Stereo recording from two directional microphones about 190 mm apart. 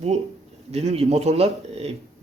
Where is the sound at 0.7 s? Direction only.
35° right (ahead or behind).